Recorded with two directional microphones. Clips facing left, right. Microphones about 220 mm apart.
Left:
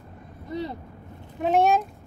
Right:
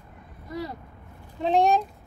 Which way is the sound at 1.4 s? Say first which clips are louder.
Left 1 dB; 5° left (ahead or behind).